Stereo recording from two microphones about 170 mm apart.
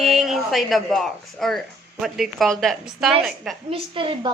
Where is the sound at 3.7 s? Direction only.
30° right (ahead or behind).